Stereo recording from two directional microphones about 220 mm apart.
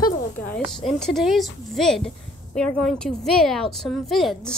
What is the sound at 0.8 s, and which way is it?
A woman's voice, centre (ahead or behind).